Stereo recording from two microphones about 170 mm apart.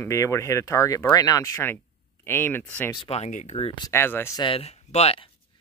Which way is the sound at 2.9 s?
35° left (ahead or behind).